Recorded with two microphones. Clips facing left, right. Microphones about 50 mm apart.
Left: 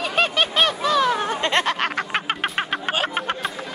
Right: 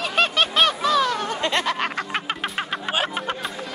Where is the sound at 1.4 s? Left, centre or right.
Left.